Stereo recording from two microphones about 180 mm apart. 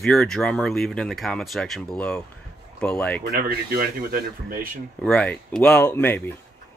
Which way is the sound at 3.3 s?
55° right (ahead or behind).